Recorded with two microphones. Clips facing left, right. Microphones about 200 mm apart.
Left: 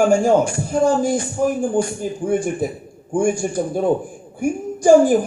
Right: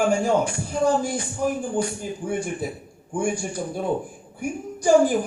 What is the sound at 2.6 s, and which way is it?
A man's voice, 45° left (ahead or behind).